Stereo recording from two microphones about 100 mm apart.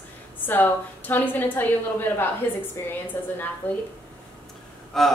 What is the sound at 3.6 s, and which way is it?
Speech, 15° left (ahead or behind).